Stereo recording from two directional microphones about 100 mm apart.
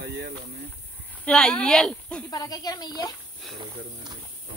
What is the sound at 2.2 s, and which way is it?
Speech, 40° left (ahead or behind).